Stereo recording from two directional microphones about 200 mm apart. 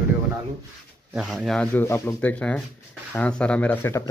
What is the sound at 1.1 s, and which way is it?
Speech, 5° right (ahead or behind).